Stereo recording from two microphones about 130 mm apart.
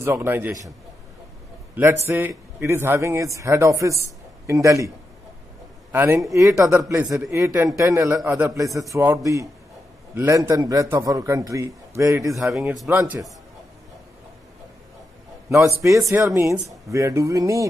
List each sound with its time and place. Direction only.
0.0 s a man's voice: 20° right (ahead or behind)
1.8 s a man's voice: 20° right (ahead or behind)
12.4 s a man's voice: centre (ahead or behind)
12.9 s a man's voice: 15° right (ahead or behind)
16.1 s a man's voice: 20° right (ahead or behind)